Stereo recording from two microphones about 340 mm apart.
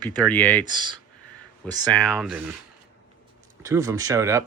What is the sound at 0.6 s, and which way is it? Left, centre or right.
Speech, centre.